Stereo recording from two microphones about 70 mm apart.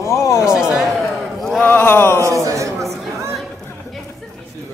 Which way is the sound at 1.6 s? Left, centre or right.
Left.